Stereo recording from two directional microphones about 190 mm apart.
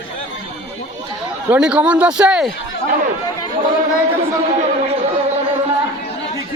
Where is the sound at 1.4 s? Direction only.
5° right (ahead or behind).